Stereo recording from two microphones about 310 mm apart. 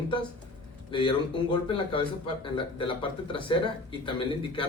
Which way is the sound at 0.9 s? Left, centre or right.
Centre.